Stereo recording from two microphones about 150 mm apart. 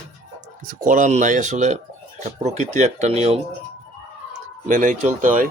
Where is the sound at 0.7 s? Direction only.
60° right (ahead or behind).